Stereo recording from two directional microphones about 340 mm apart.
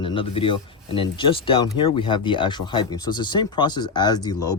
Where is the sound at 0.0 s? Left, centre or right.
Centre.